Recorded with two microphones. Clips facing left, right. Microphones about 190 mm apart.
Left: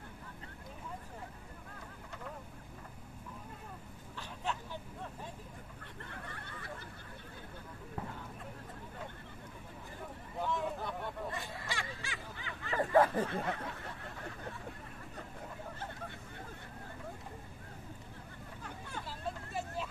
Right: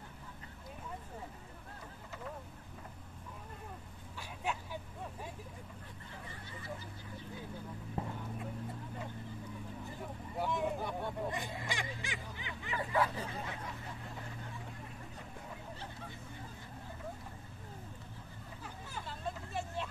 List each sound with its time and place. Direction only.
4.5 s vehicle: 10° right (ahead or behind)
6.0 s a sound: 65° left (ahead or behind)
8.0 s vehicle: 25° right (ahead or behind)
10.4 s a sound: 15° right (ahead or behind)
12.7 s snicker: 45° left (ahead or behind)
18.6 s vehicle: 5° right (ahead or behind)